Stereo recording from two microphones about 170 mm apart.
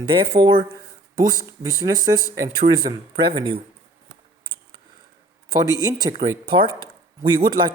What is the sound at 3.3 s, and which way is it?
Speech, 25° right (ahead or behind).